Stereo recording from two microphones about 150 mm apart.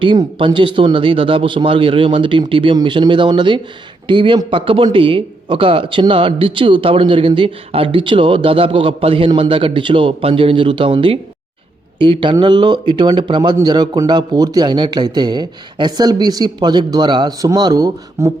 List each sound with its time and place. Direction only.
0.0 s a man's voice: 35° right (ahead or behind)